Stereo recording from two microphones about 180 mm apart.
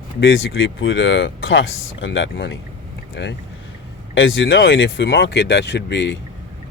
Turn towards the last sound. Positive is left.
turn(degrees=75)  # may be behind; listen again after turning